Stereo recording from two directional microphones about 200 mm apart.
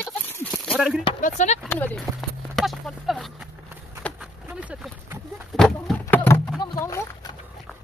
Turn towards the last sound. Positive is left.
turn(degrees=15)  # may be behind; listen again after turning